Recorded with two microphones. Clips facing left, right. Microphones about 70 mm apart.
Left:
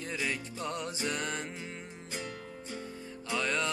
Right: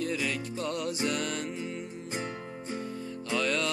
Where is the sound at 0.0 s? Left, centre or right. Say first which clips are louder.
Right 4 dB; left.